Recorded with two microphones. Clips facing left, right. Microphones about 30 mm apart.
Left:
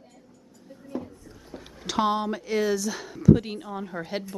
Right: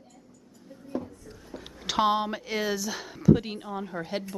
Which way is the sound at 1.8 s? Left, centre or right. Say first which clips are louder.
Even; centre.